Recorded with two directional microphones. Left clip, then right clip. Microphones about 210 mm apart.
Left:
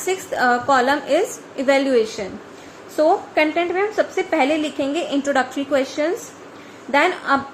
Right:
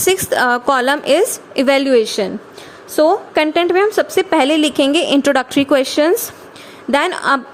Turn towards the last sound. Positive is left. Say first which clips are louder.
# right 3 dB
turn(degrees=-55)  # may be behind; listen again after turning